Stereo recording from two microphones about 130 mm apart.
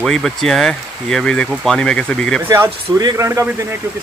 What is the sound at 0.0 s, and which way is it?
Speech, centre (ahead or behind).